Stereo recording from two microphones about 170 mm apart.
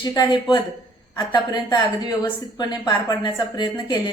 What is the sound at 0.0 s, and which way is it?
A woman's voice, 25° left (ahead or behind).